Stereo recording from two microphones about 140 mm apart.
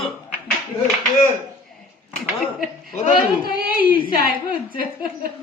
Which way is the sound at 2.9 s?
60° left (ahead or behind).